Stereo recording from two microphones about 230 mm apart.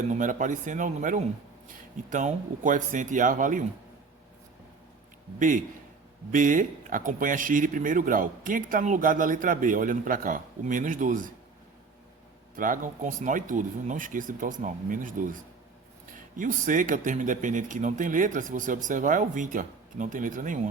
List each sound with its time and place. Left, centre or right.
0.1 s speech: right
5.4 s speech: right
12.5 s speech: right